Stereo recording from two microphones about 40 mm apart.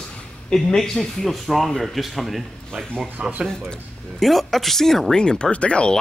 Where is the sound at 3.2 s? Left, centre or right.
Right.